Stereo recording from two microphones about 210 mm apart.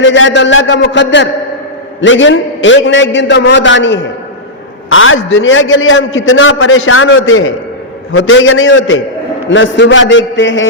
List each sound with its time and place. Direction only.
0.0 s a man's voice: 60° left (ahead or behind)